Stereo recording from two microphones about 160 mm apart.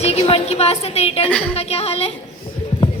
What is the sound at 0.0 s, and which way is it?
A woman's voice, 40° left (ahead or behind).